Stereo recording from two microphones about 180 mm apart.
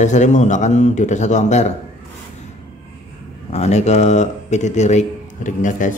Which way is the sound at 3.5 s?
40° left (ahead or behind).